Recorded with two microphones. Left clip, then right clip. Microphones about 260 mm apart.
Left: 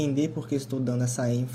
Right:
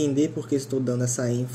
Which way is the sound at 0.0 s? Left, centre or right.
Left.